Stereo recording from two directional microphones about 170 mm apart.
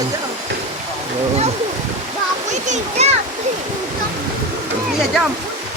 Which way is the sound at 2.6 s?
45° right (ahead or behind).